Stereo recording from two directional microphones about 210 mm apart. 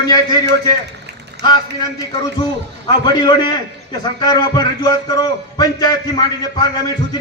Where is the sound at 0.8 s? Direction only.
55° right (ahead or behind).